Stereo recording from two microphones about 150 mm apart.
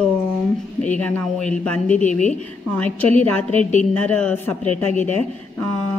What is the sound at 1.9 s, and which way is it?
Speech, 55° left (ahead or behind).